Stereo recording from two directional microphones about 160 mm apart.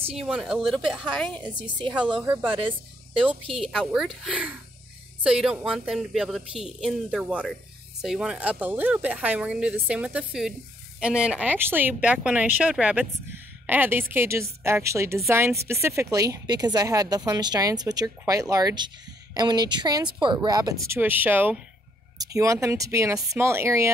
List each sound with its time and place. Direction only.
0.3 s a woman's voice: 5° right (ahead or behind)
1.8 s a woman's voice: 30° right (ahead or behind)
3.5 s a woman's voice: centre (ahead or behind); by 23.9 s 15° right (ahead or behind)